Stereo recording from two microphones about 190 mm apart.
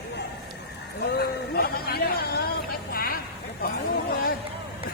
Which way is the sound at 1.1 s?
55° left (ahead or behind).